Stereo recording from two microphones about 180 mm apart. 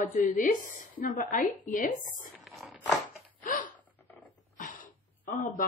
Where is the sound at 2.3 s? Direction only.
Centre (ahead or behind).